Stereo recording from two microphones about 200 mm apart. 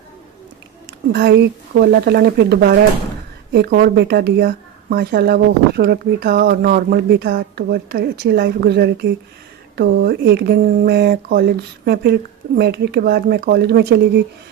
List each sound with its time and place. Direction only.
1.1 s speech: 55° right (ahead or behind)